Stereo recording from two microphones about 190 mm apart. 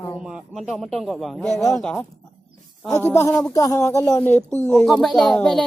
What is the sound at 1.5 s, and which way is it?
Speech, 15° left (ahead or behind).